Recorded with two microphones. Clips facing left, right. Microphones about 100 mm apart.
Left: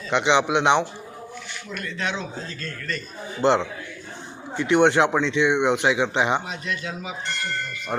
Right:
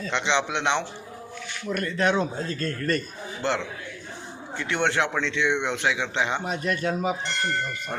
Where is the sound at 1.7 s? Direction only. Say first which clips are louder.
Right 6 dB; 45° right (ahead or behind).